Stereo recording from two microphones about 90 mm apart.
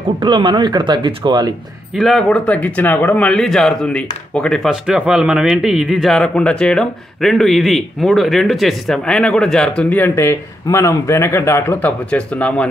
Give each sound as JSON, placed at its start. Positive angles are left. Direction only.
{"t": 0.2, "sound": "speech", "side_deg": -60}
{"t": 2.0, "sound": "speech", "side_deg": 0}
{"t": 2.2, "sound": "speech", "side_deg": 15}
{"t": 4.6, "sound": "speech", "side_deg": -10}
{"t": 6.1, "sound": "speech", "side_deg": 10}
{"t": 10.1, "sound": "speech", "side_deg": 30}
{"t": 12.1, "sound": "speech", "side_deg": 15}